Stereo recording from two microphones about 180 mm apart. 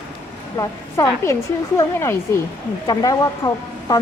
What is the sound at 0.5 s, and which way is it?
A woman's voice, 20° left (ahead or behind).